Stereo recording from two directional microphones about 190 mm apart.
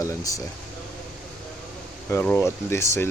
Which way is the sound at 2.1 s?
10° left (ahead or behind).